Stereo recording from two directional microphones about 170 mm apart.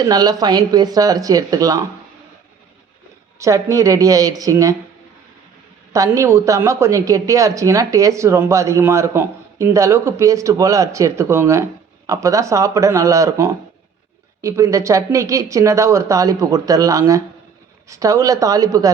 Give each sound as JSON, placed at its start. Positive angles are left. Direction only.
{"t": 0.0, "sound": "speech", "side_deg": -25}
{"t": 3.3, "sound": "speech", "side_deg": -20}
{"t": 5.9, "sound": "speech", "side_deg": -20}